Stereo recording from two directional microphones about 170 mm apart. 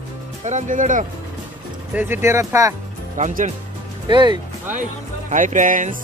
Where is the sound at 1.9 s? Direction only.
15° right (ahead or behind).